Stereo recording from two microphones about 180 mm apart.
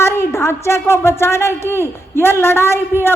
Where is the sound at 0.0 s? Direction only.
15° left (ahead or behind).